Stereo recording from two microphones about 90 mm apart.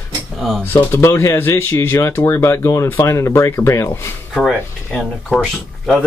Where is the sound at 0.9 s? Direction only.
30° left (ahead or behind).